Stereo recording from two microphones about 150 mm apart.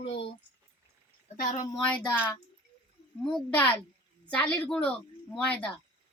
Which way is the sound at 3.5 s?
10° left (ahead or behind).